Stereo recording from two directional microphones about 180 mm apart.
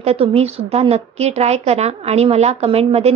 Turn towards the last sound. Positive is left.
turn(degrees=-35)  # may be behind; listen again after turning